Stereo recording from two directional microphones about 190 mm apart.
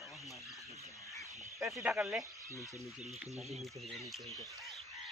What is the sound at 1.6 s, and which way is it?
Speech, centre (ahead or behind).